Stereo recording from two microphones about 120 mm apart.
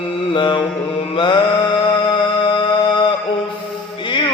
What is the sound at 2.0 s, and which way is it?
Music, 40° left (ahead or behind).